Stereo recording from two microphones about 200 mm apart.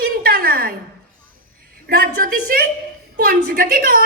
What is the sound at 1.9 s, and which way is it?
A woman's voice, 45° right (ahead or behind).